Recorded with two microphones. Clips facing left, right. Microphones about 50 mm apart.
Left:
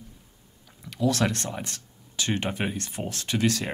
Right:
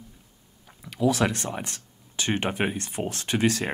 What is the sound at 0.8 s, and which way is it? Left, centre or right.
Speech, centre.